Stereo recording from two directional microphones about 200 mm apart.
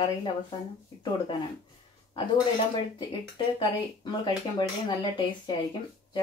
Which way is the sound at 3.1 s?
25° left (ahead or behind).